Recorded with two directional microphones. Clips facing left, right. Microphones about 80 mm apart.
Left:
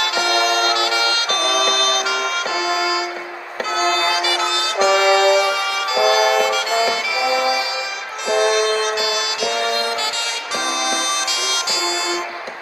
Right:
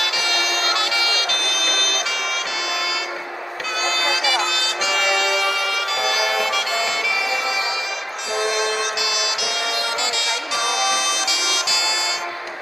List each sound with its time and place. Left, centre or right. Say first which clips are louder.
0.0 s music: left 6 dB; left
6.7 s music: left 4 dB; left
9.0 s music: left 3 dB; left